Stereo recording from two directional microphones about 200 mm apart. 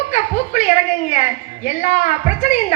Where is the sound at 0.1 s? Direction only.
35° left (ahead or behind).